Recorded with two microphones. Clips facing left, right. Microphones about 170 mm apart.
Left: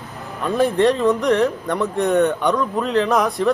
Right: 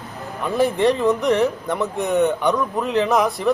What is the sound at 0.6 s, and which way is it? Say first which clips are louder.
Speech: left 1 dB; 5° right (ahead or behind).